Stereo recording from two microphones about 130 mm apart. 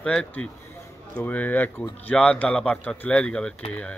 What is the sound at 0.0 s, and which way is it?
A man's voice, 5° left (ahead or behind).